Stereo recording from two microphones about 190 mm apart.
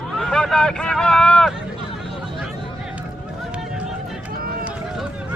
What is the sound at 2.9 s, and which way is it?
Run, 5° right (ahead or behind).